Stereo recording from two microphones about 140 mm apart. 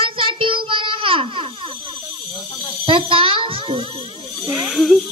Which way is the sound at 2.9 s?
40° right (ahead or behind).